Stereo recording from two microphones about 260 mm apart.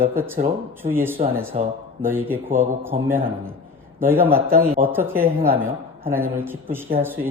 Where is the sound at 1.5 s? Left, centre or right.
Right.